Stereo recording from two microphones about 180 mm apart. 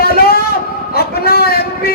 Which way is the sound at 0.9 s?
60° left (ahead or behind).